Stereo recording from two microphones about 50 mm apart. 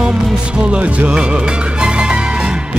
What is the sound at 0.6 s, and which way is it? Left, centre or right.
Music, right.